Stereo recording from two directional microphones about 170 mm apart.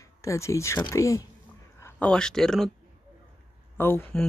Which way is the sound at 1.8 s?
5° left (ahead or behind).